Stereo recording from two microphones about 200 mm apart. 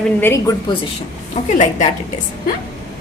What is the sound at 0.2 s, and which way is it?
Speech, 10° left (ahead or behind).